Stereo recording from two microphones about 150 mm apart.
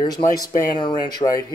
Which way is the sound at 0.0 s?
25° left (ahead or behind).